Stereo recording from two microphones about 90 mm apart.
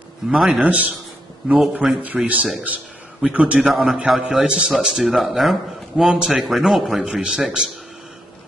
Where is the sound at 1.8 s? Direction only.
15° right (ahead or behind).